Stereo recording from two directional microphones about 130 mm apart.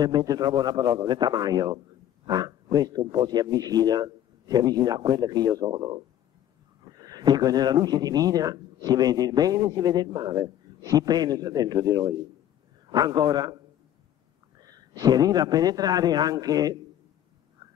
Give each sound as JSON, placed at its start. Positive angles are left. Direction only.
{"t": 0.0, "sound": "speech", "side_deg": -30}
{"t": 14.6, "sound": "a man's voice", "side_deg": -30}
{"t": 17.6, "sound": "a sound", "side_deg": -30}